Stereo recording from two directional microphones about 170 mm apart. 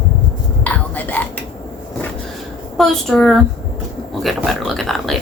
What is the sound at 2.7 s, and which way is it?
Speech, centre (ahead or behind).